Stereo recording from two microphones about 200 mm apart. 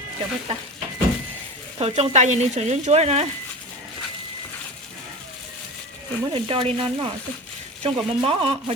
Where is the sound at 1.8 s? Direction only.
35° right (ahead or behind).